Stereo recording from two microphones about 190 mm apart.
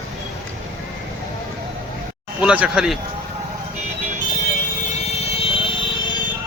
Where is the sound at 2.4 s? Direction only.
5° right (ahead or behind).